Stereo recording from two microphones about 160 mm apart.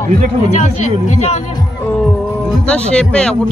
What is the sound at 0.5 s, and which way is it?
Speech, 45° left (ahead or behind).